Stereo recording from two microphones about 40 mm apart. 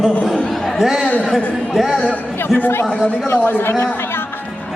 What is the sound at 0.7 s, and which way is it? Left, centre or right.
Speech, centre.